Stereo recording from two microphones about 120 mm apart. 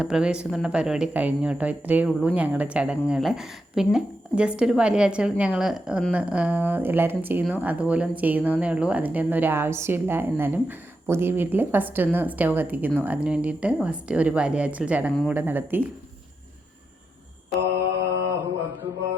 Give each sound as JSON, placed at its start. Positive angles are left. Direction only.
{"t": 0.0, "sound": "a woman's voice", "side_deg": -5}
{"t": 18.1, "sound": "mantra", "side_deg": -25}